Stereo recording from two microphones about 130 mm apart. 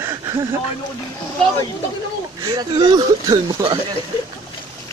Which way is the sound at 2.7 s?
35° right (ahead or behind).